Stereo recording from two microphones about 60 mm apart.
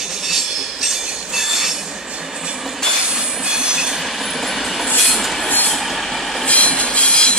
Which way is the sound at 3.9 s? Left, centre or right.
Centre.